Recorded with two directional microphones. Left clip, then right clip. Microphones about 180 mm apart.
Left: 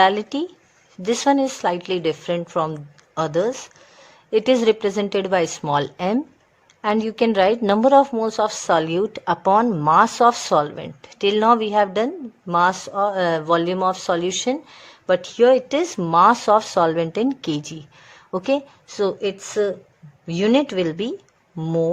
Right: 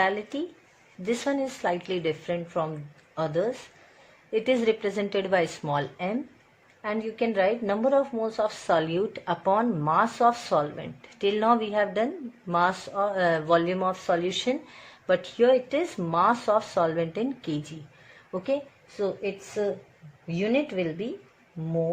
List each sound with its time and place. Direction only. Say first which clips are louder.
0.0 s a woman's voice: left 9 dB; 40° left (ahead or behind)